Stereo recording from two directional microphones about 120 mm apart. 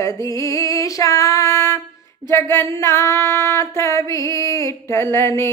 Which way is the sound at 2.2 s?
20° left (ahead or behind).